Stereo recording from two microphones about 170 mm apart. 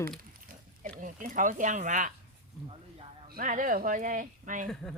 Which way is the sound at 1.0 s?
50° right (ahead or behind).